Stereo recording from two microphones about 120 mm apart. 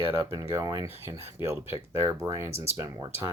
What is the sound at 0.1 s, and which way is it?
Speech, 25° right (ahead or behind).